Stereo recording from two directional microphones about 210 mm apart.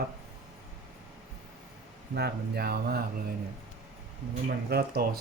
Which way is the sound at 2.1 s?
50° right (ahead or behind).